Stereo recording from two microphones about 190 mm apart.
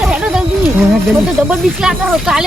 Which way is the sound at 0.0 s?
5° right (ahead or behind).